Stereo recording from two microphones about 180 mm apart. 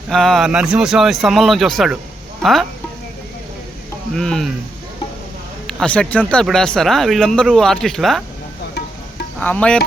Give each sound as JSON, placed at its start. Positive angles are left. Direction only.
{"t": 0.1, "sound": "speech", "side_deg": 0}
{"t": 4.1, "sound": "speech", "side_deg": 5}
{"t": 5.6, "sound": "speech", "side_deg": 5}
{"t": 9.4, "sound": "music", "side_deg": 10}